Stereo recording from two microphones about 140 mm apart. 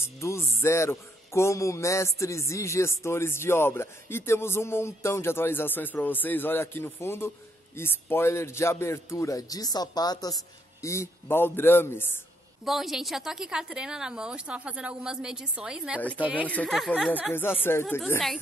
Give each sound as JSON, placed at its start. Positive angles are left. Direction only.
{"t": 0.2, "sound": "a man's voice", "side_deg": 20}
{"t": 12.6, "sound": "a woman's voice", "side_deg": 0}
{"t": 16.4, "sound": "a man's voice", "side_deg": 10}
{"t": 16.7, "sound": "a woman's voice", "side_deg": 0}
{"t": 17.3, "sound": "a man's voice", "side_deg": 15}